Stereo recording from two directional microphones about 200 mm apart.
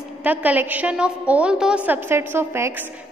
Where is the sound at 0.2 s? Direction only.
10° right (ahead or behind).